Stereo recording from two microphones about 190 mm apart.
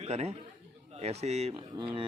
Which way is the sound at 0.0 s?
35° right (ahead or behind).